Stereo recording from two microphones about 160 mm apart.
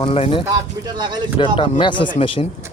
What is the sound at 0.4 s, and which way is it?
Speech, 25° right (ahead or behind).